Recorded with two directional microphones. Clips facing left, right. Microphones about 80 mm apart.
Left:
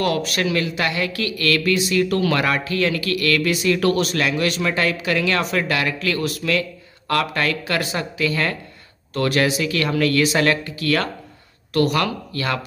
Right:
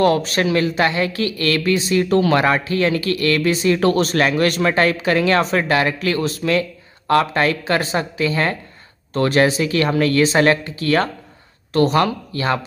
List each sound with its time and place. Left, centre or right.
0.0 s speech: right